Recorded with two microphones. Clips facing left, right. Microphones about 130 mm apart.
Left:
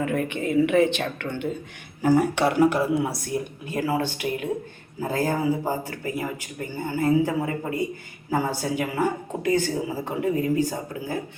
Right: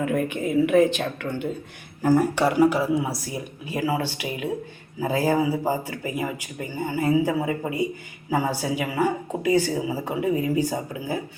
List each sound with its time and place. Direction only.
0.0 s a woman's voice: centre (ahead or behind)